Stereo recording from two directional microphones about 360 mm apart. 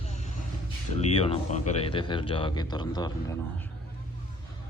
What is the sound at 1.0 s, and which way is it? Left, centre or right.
Speech, centre.